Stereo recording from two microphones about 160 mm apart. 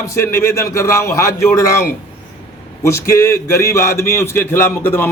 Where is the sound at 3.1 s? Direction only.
15° left (ahead or behind).